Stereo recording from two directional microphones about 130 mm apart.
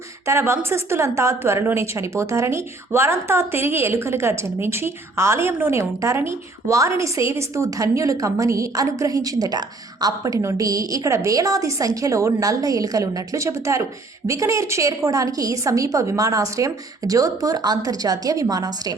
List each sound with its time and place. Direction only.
0.3 s a woman's voice: 20° right (ahead or behind)